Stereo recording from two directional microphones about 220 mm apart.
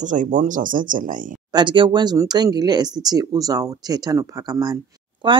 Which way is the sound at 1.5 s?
20° right (ahead or behind).